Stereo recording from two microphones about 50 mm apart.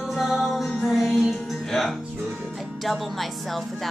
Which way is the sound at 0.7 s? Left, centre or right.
Centre.